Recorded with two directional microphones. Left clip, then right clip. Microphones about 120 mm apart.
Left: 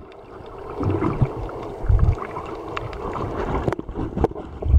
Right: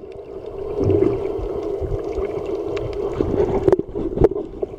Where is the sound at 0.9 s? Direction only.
10° right (ahead or behind).